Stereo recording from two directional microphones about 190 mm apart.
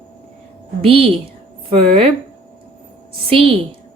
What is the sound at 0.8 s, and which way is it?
Speech, 30° right (ahead or behind).